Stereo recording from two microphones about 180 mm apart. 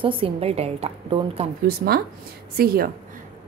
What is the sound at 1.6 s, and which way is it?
Speech, 55° right (ahead or behind).